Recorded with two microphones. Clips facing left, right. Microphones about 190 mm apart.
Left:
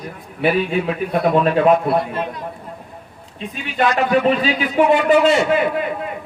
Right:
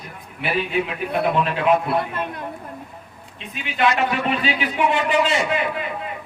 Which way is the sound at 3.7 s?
40° left (ahead or behind).